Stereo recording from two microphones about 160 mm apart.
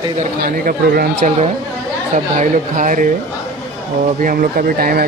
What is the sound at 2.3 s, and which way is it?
Speech, 55° right (ahead or behind).